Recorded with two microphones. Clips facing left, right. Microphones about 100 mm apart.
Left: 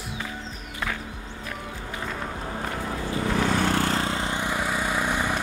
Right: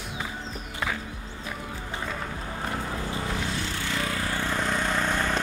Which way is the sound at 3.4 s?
55° left (ahead or behind).